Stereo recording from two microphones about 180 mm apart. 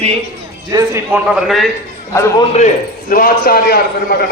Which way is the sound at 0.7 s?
15° right (ahead or behind).